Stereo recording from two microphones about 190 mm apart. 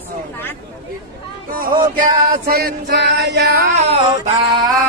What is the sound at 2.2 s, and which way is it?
Female singing, 50° right (ahead or behind).